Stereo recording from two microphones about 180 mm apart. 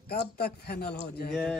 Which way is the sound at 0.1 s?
60° left (ahead or behind).